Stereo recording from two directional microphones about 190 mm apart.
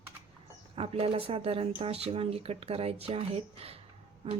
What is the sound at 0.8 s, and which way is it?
Speech, 30° right (ahead or behind).